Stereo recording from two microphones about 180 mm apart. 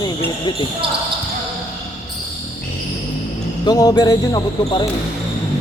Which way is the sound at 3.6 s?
20° left (ahead or behind).